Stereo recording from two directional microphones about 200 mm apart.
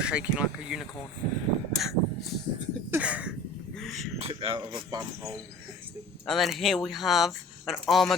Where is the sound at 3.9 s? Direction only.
30° right (ahead or behind).